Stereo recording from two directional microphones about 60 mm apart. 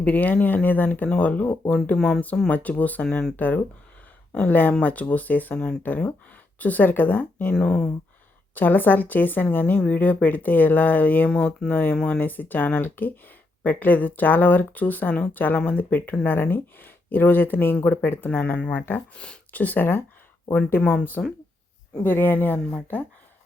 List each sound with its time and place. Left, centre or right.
0.0 s a woman's voice: left
1.0 s speech: centre
1.3 s a woman's voice: left
2.0 s speech: centre
2.5 s a woman's voice: left
5.5 s speech: centre
5.8 s a woman's voice: left
7.5 s speech: centre
8.5 s a woman's voice: left
11.9 s speech: centre
12.2 s a woman's voice: left
18.3 s a woman's voice: left
19.1 s speech: centre
19.5 s speech: left